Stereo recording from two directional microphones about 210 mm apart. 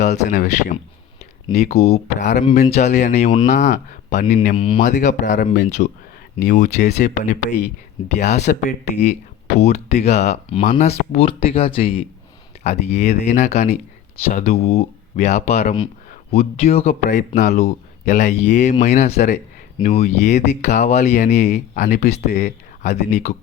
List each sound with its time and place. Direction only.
0.1 s speech: 35° left (ahead or behind)
4.5 s speech: 25° left (ahead or behind)
5.0 s speech: 35° left (ahead or behind)
22.3 s speech: 50° left (ahead or behind)
22.8 s speech: 35° left (ahead or behind)